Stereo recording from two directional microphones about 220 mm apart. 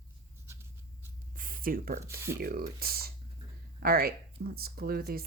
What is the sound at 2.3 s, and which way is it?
Speech, 40° right (ahead or behind).